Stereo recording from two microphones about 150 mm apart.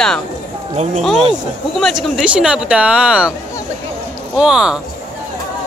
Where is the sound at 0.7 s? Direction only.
50° right (ahead or behind).